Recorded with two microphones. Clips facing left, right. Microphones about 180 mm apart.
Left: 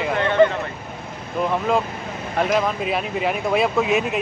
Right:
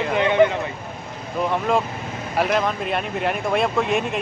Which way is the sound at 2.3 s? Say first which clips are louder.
Left 1 dB; centre (ahead or behind).